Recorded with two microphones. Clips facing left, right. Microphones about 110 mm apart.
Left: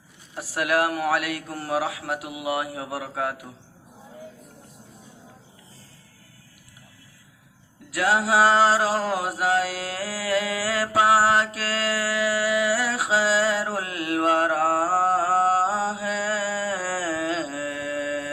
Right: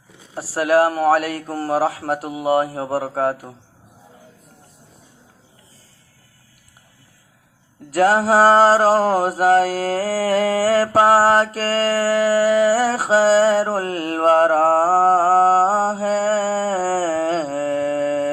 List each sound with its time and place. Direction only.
0.3 s a man's voice: 35° right (ahead or behind)
7.9 s mantra: 40° right (ahead or behind)